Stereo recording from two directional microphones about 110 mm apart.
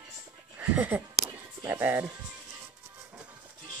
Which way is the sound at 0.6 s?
15° right (ahead or behind).